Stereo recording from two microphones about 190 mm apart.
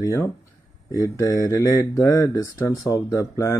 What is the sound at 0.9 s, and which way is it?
Speech, 15° left (ahead or behind).